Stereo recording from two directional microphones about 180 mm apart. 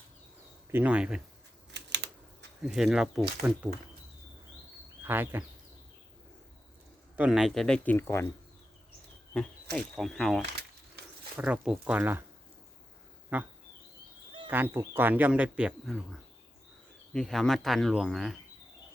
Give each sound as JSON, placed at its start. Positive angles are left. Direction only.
{"t": 0.7, "sound": "speech", "side_deg": -10}
{"t": 1.7, "sound": "typing", "side_deg": -75}
{"t": 2.6, "sound": "speech", "side_deg": -5}
{"t": 5.0, "sound": "speech", "side_deg": -10}
{"t": 7.2, "sound": "speech", "side_deg": -5}
{"t": 9.7, "sound": "speech", "side_deg": 5}
{"t": 13.3, "sound": "speech", "side_deg": -10}
{"t": 14.5, "sound": "speech", "side_deg": -10}
{"t": 17.1, "sound": "speech", "side_deg": 0}